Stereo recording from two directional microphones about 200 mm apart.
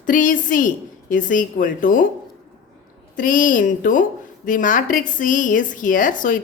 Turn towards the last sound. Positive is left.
turn(degrees=40)  # may be behind; listen again after turning